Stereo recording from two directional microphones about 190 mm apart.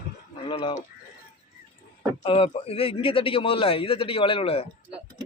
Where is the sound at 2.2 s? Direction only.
30° left (ahead or behind).